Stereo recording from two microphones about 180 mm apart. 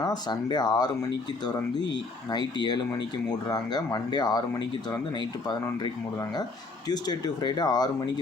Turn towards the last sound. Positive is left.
turn(degrees=20)  # may be behind; listen again after turning